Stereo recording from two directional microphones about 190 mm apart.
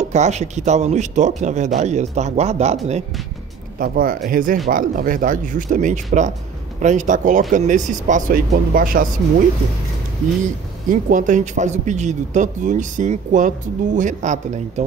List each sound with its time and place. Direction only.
0.0 s a man's voice: 35° right (ahead or behind)
3.8 s a man's voice: 45° right (ahead or behind)
10.9 s a man's voice: 45° right (ahead or behind)